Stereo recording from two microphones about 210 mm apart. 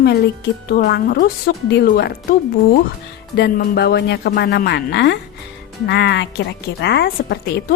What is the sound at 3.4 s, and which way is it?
Speech, 50° left (ahead or behind).